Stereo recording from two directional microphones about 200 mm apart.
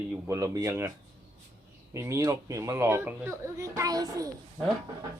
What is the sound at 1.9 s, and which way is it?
Speech, 15° right (ahead or behind).